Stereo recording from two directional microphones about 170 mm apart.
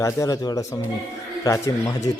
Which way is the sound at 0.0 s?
20° left (ahead or behind).